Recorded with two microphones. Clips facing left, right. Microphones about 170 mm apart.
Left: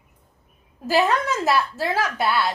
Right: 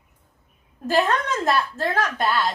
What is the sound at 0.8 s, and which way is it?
A woman's voice, 5° left (ahead or behind).